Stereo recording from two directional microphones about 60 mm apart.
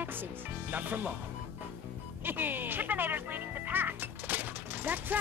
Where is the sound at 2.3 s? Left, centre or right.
Right.